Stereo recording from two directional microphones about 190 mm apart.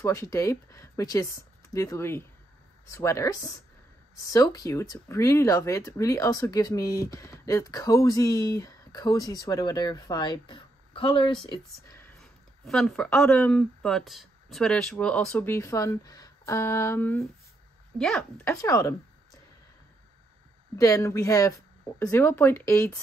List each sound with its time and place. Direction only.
0.0 s speech: 15° left (ahead or behind)
12.2 s a woman's voice: centre (ahead or behind)
18.5 s speech: 15° left (ahead or behind)
20.7 s speech: 15° left (ahead or behind)